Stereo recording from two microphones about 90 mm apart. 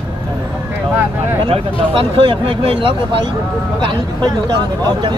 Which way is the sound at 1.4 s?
85° right.